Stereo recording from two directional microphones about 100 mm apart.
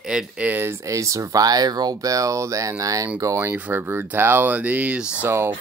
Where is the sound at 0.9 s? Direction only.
35° right (ahead or behind).